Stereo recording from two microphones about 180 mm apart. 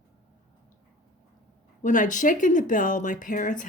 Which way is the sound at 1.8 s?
45° left (ahead or behind).